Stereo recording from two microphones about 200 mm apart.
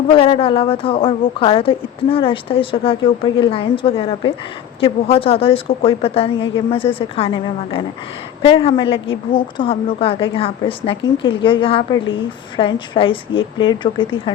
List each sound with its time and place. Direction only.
0.1 s a woman's voice: 25° left (ahead or behind)